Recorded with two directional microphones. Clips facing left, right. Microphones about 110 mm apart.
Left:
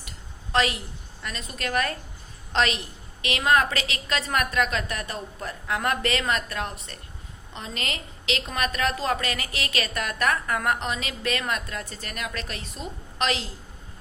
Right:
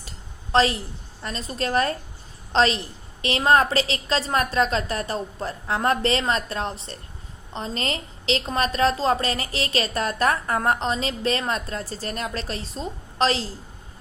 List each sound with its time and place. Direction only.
0.5 s a woman's voice: 30° right (ahead or behind)